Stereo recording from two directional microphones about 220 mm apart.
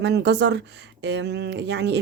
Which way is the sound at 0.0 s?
50° right (ahead or behind).